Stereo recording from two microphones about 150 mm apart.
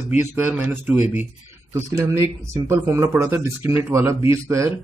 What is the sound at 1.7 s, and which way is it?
Speech, 20° right (ahead or behind).